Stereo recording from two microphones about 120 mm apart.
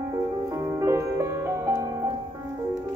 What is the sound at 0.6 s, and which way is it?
Music, 25° right (ahead or behind).